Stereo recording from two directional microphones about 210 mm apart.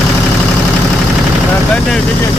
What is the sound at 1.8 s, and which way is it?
Speech, 5° left (ahead or behind).